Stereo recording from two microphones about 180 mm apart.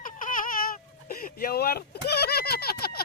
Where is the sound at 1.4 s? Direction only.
55° left (ahead or behind).